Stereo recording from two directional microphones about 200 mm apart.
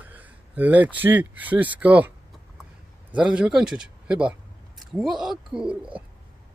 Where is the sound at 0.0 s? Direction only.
10° right (ahead or behind).